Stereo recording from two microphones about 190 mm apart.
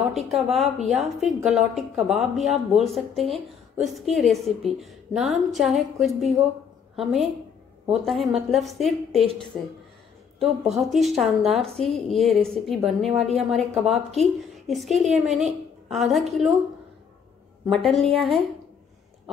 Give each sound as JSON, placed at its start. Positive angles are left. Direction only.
{"t": 0.1, "sound": "a woman's voice", "side_deg": 0}
{"t": 14.7, "sound": "a woman's voice", "side_deg": 0}
{"t": 17.6, "sound": "a woman's voice", "side_deg": 0}